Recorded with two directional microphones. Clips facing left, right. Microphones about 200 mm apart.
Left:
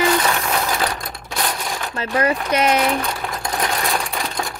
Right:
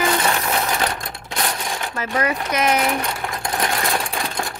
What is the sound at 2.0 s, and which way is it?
Speech, 30° left (ahead or behind).